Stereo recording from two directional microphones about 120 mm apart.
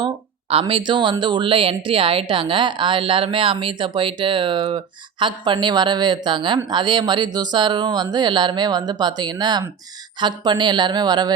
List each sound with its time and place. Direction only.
0.7 s a woman's voice: 40° right (ahead or behind)